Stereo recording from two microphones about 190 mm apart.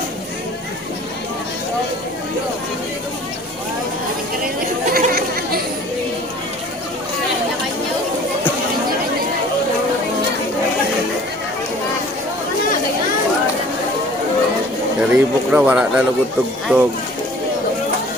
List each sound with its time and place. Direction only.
4.9 s chatter: 50° right (ahead or behind)
15.1 s speech: 5° right (ahead or behind)